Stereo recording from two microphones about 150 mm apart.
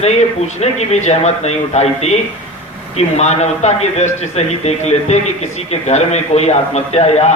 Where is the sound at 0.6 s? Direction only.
50° left (ahead or behind).